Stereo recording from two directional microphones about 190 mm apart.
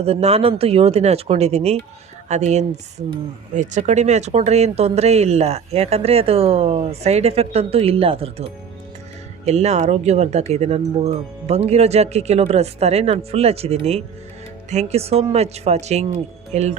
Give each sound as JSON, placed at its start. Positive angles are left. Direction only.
{"t": 0.0, "sound": "speech", "side_deg": -35}